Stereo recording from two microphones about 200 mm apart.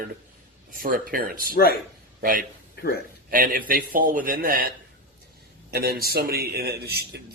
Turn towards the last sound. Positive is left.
turn(degrees=-50)  # may be behind; listen again after turning